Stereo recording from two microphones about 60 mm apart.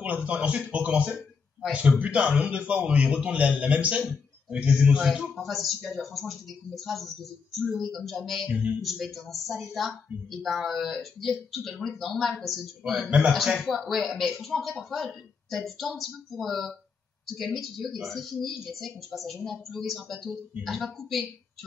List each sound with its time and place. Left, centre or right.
0.0 s a man's voice: right; by 21.2 s centre